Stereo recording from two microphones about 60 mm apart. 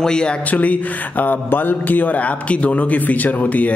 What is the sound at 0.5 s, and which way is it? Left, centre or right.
A man's voice, left.